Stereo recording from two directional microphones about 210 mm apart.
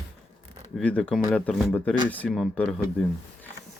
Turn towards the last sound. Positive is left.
turn(degrees=0)  # may be behind; listen again after turning